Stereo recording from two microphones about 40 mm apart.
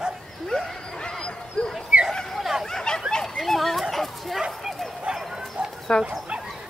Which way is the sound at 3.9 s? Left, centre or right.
Centre.